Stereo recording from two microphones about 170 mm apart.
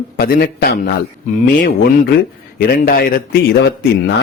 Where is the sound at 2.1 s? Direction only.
60° left (ahead or behind).